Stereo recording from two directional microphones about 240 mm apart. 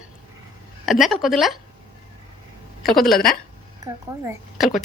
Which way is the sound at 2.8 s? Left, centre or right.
Centre.